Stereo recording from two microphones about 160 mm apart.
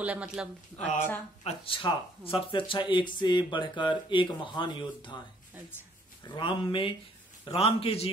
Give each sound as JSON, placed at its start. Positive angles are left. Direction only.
{"t": 0.0, "sound": "speech", "side_deg": -10}
{"t": 0.7, "sound": "speech", "side_deg": 45}
{"t": 6.2, "sound": "speech", "side_deg": 30}